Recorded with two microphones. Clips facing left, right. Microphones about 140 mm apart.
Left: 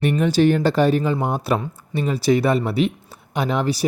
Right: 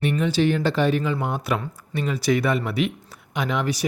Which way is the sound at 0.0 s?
45° left (ahead or behind).